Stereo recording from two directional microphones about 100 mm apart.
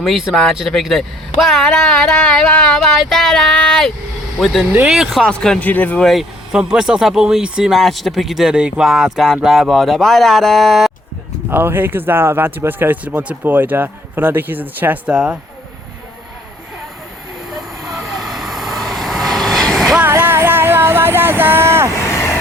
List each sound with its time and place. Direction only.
0.0 s speech: centre (ahead or behind); by 6.0 s 15° left (ahead or behind)
6.0 s speech: centre (ahead or behind)
7.8 s speech: centre (ahead or behind)
11.5 s speech: 20° right (ahead or behind)
17.5 s vehicle: centre (ahead or behind)
20.0 s music: 20° right (ahead or behind)